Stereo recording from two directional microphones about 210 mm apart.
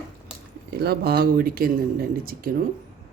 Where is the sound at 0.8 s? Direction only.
50° right (ahead or behind).